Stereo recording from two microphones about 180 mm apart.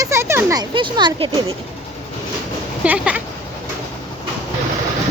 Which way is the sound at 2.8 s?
5° right (ahead or behind).